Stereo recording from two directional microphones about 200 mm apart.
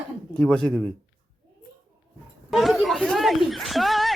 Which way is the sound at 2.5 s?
Centre (ahead or behind).